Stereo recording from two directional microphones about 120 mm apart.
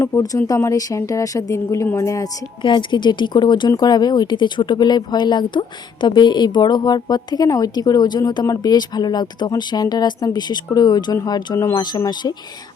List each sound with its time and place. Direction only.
0.0 s speech: 25° left (ahead or behind)
2.6 s speech: 40° left (ahead or behind)